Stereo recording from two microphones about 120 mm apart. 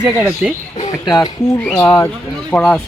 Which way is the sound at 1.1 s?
30° left (ahead or behind).